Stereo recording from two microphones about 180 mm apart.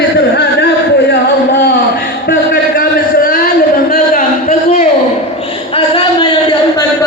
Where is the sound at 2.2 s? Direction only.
65° left (ahead or behind); by 4.9 s 45° left (ahead or behind).